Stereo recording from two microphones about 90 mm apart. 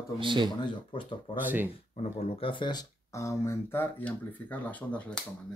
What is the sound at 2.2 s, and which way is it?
Speech, 90° left.